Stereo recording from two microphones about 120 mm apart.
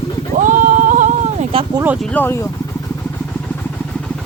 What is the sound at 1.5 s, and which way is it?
Speech, 50° right (ahead or behind).